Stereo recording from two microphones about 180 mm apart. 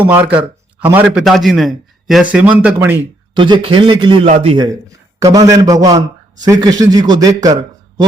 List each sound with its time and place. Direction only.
0.0 s a man's voice: 10° right (ahead or behind)
3.3 s a man's voice: 25° right (ahead or behind)